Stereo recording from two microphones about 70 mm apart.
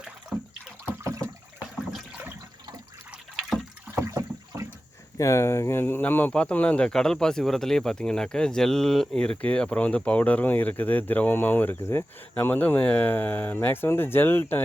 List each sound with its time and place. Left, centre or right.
4.0 s a sound: right
5.1 s speech: left
12.4 s speech: left